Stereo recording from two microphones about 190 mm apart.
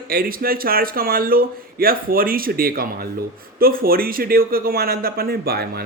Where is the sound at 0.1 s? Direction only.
50° right (ahead or behind).